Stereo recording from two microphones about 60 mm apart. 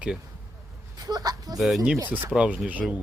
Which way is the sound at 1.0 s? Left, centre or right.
Right.